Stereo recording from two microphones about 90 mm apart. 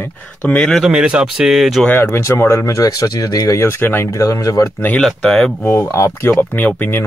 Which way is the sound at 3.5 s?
25° left (ahead or behind).